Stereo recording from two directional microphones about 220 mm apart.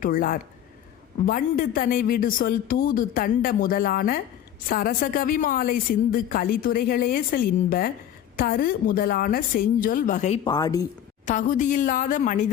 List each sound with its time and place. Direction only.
0.0 s a woman's voice: 40° left (ahead or behind)
10.4 s speech: 15° left (ahead or behind)
11.3 s a woman's voice: 35° left (ahead or behind)